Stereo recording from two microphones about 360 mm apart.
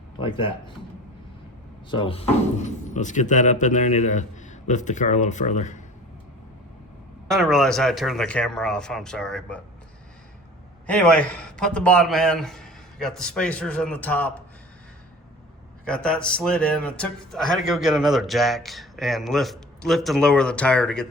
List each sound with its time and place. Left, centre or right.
0.2 s speech: centre
1.9 s speech: centre
7.3 s speech: centre
10.8 s speech: centre
15.8 s speech: centre